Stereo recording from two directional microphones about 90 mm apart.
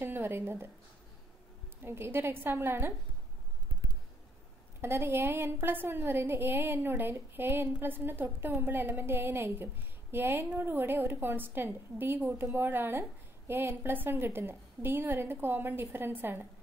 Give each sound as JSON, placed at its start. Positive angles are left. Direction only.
{"t": 0.0, "sound": "speech", "side_deg": -25}
{"t": 1.8, "sound": "a woman's voice", "side_deg": -25}
{"t": 4.8, "sound": "a woman's voice", "side_deg": -25}